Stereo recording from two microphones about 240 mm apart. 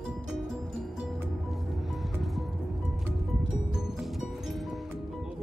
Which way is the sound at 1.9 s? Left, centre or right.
Centre.